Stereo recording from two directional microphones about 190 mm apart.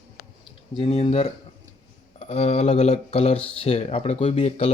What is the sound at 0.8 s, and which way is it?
Speech, 30° left (ahead or behind).